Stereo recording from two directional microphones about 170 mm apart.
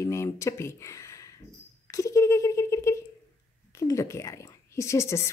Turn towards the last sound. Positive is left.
turn(degrees=15)  # may be behind; listen again after turning